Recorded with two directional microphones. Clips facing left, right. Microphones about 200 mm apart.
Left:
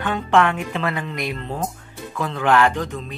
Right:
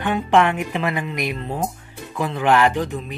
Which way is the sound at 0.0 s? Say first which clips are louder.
Right 1 dB; 15° right (ahead or behind).